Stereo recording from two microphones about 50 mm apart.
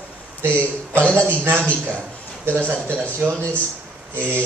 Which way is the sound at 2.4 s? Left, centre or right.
Right.